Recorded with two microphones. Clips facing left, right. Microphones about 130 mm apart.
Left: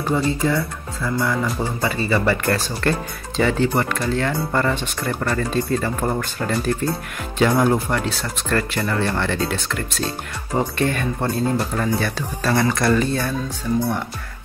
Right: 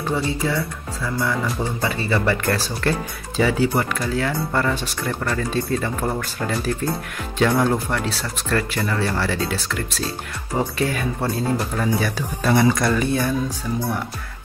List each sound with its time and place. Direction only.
0.1 s speech: centre (ahead or behind)
12.4 s speech: 20° right (ahead or behind)
12.7 s speech: centre (ahead or behind)
13.0 s speech: 15° right (ahead or behind)